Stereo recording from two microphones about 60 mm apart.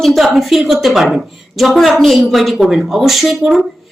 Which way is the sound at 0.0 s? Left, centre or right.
Centre.